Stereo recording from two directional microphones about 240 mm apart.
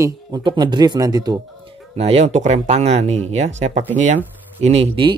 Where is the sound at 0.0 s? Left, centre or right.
Centre.